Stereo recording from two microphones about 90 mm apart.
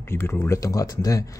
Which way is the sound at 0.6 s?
40° left (ahead or behind).